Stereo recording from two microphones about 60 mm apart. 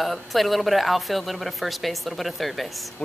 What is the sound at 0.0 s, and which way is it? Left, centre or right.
Speech, centre.